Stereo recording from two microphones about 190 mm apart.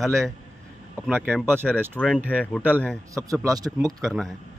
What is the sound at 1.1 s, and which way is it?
Speech, 10° right (ahead or behind).